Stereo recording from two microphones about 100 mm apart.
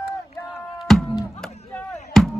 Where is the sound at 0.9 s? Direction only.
5° left (ahead or behind).